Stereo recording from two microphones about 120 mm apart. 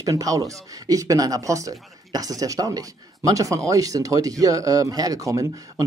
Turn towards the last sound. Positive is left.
turn(degrees=-30)  # may be behind; listen again after turning